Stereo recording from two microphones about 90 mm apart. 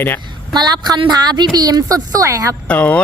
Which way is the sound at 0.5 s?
50° right (ahead or behind).